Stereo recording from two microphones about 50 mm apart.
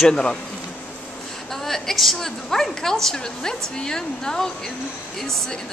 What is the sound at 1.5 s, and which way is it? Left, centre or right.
Speech, centre.